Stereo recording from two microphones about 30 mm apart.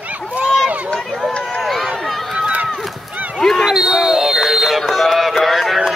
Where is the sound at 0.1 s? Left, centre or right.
Right.